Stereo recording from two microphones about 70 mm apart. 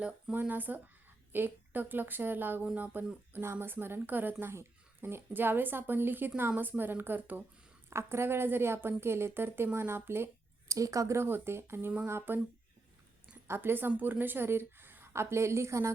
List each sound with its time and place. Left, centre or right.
0.3 s a woman's voice: right
7.9 s a woman's voice: right
10.7 s speech: right
11.2 s a woman's voice: right
13.5 s a woman's voice: right